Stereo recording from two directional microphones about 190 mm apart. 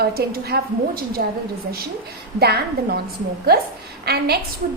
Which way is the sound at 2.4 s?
55° right (ahead or behind).